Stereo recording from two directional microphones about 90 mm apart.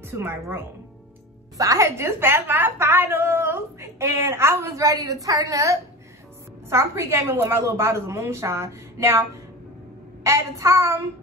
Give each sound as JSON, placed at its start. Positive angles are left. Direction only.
{"t": 0.1, "sound": "a woman's voice", "side_deg": -25}
{"t": 10.2, "sound": "a woman's voice", "side_deg": -30}